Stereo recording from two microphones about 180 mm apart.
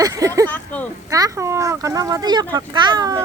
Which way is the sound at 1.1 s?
15° right (ahead or behind).